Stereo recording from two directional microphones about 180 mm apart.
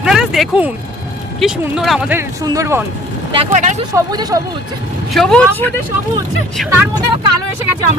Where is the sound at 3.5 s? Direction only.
45° right (ahead or behind).